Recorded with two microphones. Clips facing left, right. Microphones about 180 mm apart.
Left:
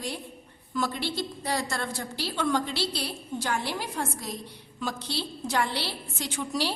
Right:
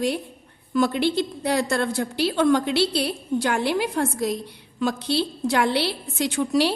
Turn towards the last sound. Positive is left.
turn(degrees=-65)  # may be behind; listen again after turning